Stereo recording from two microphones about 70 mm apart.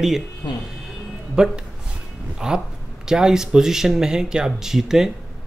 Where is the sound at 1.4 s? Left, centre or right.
Centre.